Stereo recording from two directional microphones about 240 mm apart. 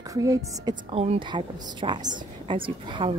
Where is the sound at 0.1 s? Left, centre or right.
Centre.